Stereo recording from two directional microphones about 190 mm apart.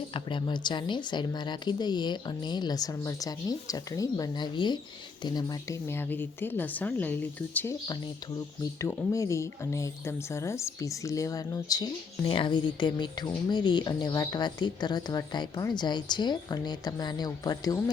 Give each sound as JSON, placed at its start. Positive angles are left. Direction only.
{"t": 0.1, "sound": "speech", "side_deg": 25}
{"t": 5.9, "sound": "a woman's voice", "side_deg": 10}
{"t": 8.8, "sound": "speech", "side_deg": 15}